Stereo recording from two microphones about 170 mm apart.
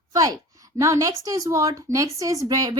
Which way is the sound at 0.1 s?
20° right (ahead or behind).